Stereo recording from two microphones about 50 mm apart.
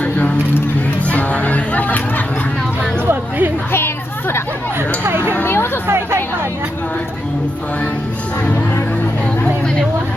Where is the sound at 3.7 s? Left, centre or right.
Left.